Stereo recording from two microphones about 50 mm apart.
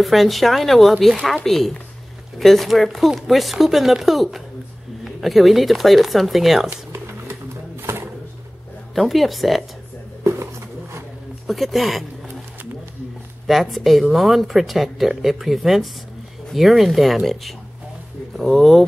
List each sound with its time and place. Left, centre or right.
0.0 s speech: centre
6.9 s pigeon: right
8.9 s speech: centre
10.2 s a sound: right
11.4 s speech: centre
13.5 s speech: centre